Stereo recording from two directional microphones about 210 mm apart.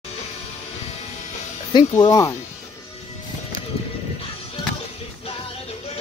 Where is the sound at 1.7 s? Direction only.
20° left (ahead or behind).